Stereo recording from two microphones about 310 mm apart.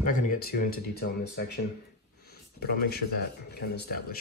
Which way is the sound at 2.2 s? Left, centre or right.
Left.